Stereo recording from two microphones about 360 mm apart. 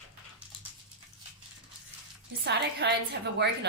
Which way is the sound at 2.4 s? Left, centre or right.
Right.